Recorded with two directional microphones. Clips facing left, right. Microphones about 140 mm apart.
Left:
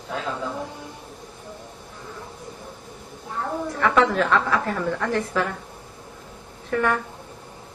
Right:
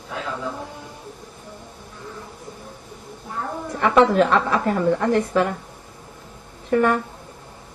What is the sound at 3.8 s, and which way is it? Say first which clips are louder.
A woman's voice: right 4 dB; 25° right (ahead or behind).